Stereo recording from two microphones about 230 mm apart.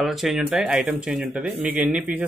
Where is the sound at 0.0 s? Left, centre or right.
Centre.